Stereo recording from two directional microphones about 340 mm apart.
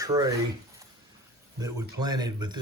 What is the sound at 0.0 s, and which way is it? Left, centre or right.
Speech, centre.